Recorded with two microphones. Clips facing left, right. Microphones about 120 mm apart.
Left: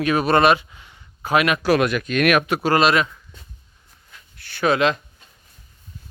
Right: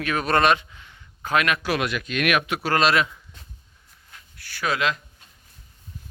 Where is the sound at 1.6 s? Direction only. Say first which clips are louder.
Left 7 dB; 45° left (ahead or behind).